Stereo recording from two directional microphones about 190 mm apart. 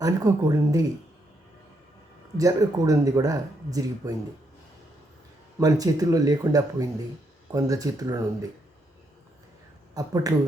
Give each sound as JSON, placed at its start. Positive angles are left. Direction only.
{"t": 0.0, "sound": "speech", "side_deg": -20}
{"t": 2.4, "sound": "speech", "side_deg": -20}
{"t": 5.5, "sound": "speech", "side_deg": -20}
{"t": 9.9, "sound": "speech", "side_deg": -20}